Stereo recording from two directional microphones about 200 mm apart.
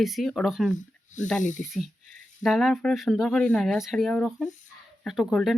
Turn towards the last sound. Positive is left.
turn(degrees=0)  # may be behind; listen again after turning